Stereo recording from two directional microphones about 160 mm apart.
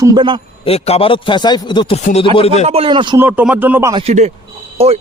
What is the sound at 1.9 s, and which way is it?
Speech, 40° left (ahead or behind).